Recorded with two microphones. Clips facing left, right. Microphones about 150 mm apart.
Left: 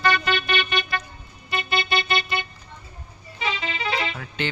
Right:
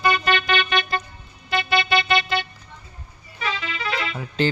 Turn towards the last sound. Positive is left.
turn(degrees=-35)  # may be behind; listen again after turning